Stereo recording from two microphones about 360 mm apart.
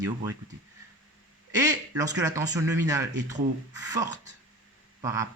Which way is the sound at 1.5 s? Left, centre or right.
Centre.